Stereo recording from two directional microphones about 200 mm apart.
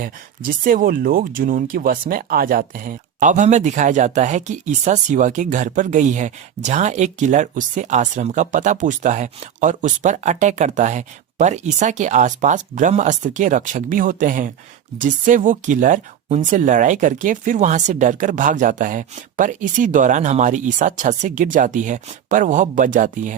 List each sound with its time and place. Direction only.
0.0 s speech: 45° right (ahead or behind)